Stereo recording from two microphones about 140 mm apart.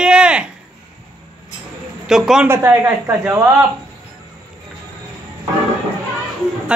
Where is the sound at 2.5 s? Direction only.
15° right (ahead or behind).